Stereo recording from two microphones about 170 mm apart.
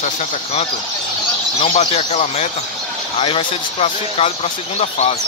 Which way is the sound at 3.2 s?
30° left (ahead or behind).